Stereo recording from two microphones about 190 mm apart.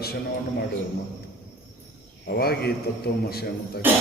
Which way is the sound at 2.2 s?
55° left (ahead or behind).